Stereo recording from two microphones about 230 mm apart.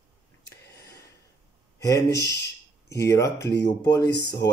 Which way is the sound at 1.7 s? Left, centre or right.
Centre.